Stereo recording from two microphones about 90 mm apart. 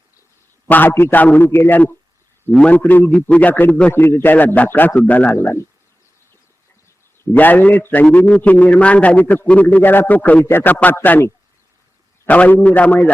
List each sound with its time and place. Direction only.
0.7 s a man's voice: 20° left (ahead or behind)
5.3 s a man's voice: 25° left (ahead or behind)
7.3 s a man's voice: 20° left (ahead or behind)
12.3 s a man's voice: 20° left (ahead or behind)